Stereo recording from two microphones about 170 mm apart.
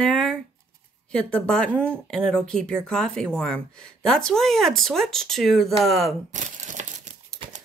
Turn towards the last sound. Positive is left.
turn(degrees=-45)  # may be behind; listen again after turning